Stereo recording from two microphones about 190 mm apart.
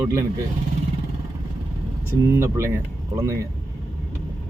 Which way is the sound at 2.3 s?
15° right (ahead or behind).